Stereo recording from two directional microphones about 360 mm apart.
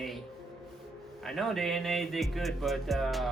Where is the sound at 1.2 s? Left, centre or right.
Centre.